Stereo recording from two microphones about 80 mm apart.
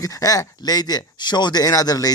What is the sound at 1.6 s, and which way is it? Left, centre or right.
Speech, left.